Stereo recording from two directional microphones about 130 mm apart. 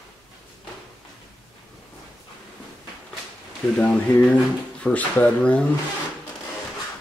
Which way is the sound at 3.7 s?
10° left (ahead or behind).